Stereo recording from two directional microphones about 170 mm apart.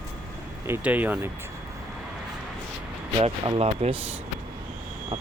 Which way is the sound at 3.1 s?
35° right (ahead or behind).